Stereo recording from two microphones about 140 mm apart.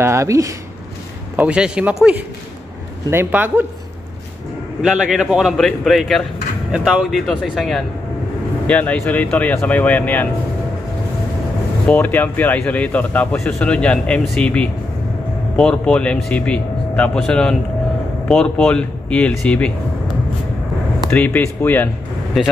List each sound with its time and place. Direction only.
0.0 s speech: 20° right (ahead or behind)
1.3 s a man's voice: 10° right (ahead or behind)
3.1 s a man's voice: 15° right (ahead or behind)
4.8 s a man's voice: centre (ahead or behind)
11.9 s speech: 10° left (ahead or behind)
21.1 s speech: 10° left (ahead or behind)
22.3 s a man's voice: centre (ahead or behind)